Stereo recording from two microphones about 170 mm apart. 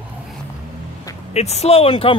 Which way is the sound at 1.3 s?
40° left (ahead or behind).